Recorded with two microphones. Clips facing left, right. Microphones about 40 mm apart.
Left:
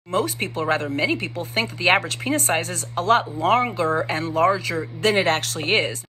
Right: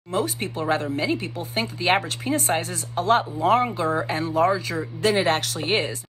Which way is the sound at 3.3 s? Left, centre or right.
Left.